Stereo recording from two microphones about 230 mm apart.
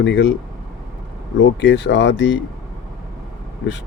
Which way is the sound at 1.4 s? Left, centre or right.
Left.